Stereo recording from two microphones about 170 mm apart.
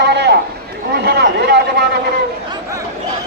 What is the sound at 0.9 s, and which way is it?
Speech, 75° right (ahead or behind).